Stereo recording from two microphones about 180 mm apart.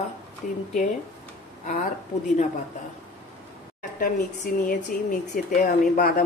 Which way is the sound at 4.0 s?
50° left (ahead or behind).